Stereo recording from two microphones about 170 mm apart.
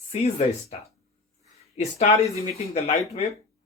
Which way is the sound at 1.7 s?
40° left (ahead or behind).